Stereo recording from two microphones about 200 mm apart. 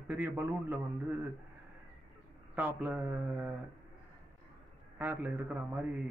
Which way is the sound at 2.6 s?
5° right (ahead or behind).